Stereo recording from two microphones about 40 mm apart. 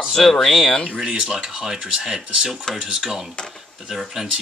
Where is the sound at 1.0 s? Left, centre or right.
Right.